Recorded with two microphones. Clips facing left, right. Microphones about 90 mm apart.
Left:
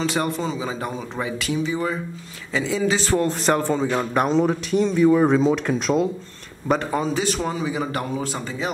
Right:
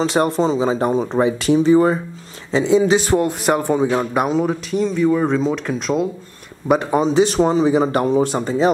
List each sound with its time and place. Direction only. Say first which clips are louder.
0.1 s speech: right 7 dB; 25° right (ahead or behind)
2.5 s a man's voice: right 8 dB; 20° right (ahead or behind); by 6.0 s centre (ahead or behind)
6.7 s speech: right 6 dB; 15° right (ahead or behind)